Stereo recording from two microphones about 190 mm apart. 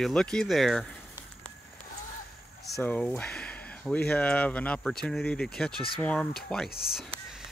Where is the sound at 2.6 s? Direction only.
5° left (ahead or behind).